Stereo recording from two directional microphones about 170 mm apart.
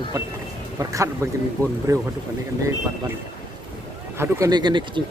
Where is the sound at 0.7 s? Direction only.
20° right (ahead or behind).